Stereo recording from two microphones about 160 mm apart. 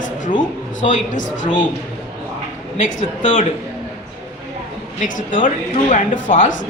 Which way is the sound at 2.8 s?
50° left (ahead or behind).